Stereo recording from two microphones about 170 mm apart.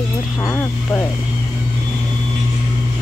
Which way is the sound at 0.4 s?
15° left (ahead or behind).